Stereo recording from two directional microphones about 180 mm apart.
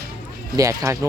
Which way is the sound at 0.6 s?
15° right (ahead or behind).